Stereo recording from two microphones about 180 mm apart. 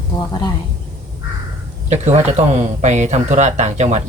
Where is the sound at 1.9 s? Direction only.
40° right (ahead or behind).